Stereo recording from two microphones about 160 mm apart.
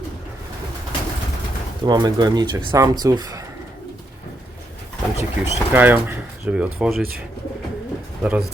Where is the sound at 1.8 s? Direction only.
25° right (ahead or behind).